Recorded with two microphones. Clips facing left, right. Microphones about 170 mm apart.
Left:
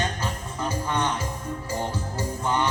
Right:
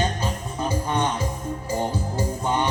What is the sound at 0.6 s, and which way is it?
Music, 20° right (ahead or behind).